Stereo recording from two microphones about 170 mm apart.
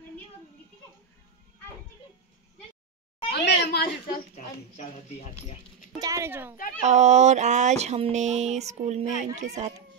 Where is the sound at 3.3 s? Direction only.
75° left (ahead or behind); by 5.5 s 45° left (ahead or behind).